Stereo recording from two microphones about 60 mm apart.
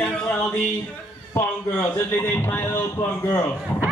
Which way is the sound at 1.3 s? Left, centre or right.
Left.